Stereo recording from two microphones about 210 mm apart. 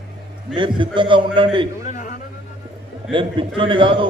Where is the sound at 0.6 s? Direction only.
25° right (ahead or behind).